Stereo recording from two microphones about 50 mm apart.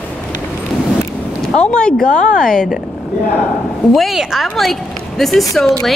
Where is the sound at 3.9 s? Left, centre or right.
Centre.